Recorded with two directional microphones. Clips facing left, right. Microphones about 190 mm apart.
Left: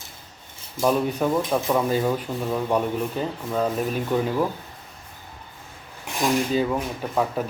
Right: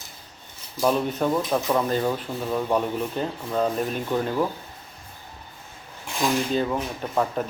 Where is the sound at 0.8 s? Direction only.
5° left (ahead or behind).